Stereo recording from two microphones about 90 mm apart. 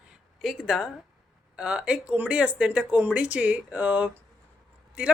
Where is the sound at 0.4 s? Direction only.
5° right (ahead or behind).